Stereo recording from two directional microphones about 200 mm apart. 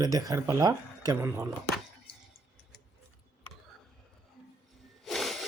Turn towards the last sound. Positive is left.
turn(degrees=0)  # may be behind; listen again after turning